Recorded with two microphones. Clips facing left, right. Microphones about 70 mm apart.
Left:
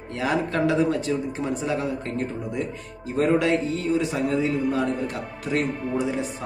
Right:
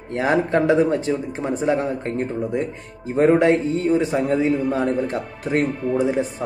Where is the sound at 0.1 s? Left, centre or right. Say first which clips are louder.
Right 6 dB; right.